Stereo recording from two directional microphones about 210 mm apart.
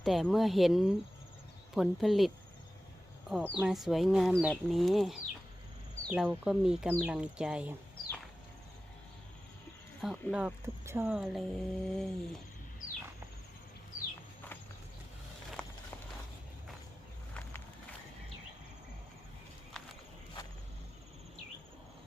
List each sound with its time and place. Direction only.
0.0 s speech: centre (ahead or behind)
10.0 s speech: centre (ahead or behind)
15.6 s walk: 5° left (ahead or behind)